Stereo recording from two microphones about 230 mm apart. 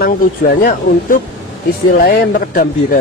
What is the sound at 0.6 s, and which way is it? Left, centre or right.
A man's voice, left.